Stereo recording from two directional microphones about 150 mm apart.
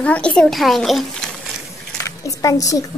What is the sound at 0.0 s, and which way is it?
A child's voice, 5° left (ahead or behind).